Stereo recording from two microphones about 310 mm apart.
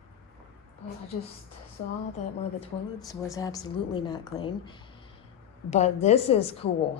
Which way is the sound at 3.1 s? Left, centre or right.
Centre.